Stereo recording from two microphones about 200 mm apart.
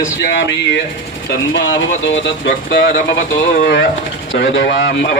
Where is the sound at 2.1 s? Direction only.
70° left (ahead or behind).